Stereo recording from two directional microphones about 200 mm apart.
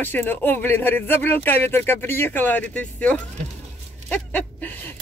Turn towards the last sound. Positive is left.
turn(degrees=5)  # may be behind; listen again after turning